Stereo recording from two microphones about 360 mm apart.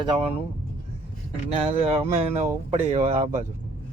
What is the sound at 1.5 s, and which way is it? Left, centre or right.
Speech, centre.